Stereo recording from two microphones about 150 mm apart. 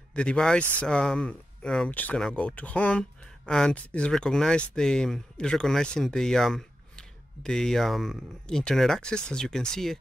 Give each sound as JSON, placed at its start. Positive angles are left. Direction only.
{"t": 0.1, "sound": "speech", "side_deg": 5}